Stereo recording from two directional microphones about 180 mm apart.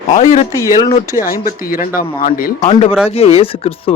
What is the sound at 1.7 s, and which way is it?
Speech, 50° left (ahead or behind).